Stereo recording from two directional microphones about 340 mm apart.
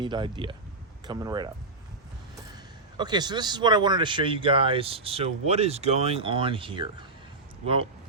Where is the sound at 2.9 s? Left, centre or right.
Centre.